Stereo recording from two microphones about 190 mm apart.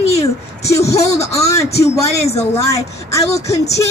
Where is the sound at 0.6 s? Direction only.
15° left (ahead or behind).